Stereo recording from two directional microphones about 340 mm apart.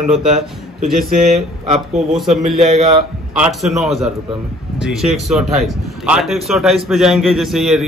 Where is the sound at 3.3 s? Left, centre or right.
Centre.